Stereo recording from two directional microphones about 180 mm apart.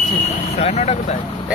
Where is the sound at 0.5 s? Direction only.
35° left (ahead or behind).